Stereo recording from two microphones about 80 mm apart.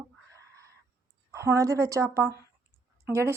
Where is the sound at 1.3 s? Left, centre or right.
Right.